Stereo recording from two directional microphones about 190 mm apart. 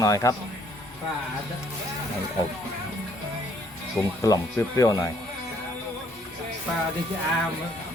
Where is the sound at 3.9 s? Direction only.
15° left (ahead or behind).